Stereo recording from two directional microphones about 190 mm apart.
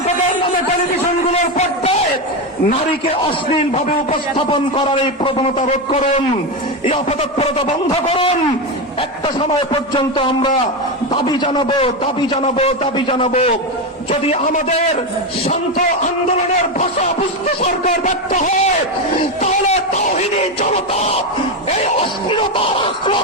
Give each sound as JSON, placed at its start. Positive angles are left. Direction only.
{"t": 1.3, "sound": "a sound", "side_deg": 35}
{"t": 3.6, "sound": "a man's voice", "side_deg": 35}
{"t": 5.9, "sound": "a man's voice", "side_deg": 40}
{"t": 17.6, "sound": "a man's voice", "side_deg": 40}